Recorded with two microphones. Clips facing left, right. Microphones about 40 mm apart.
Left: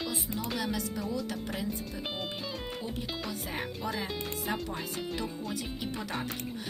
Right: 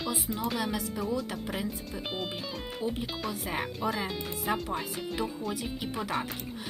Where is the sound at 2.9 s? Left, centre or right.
Centre.